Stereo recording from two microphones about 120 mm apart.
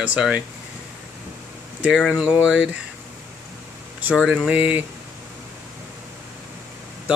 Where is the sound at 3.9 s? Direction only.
10° right (ahead or behind).